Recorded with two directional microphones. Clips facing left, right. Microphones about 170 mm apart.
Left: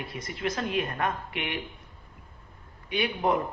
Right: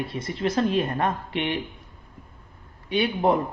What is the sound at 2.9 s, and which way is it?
Speech, 30° right (ahead or behind).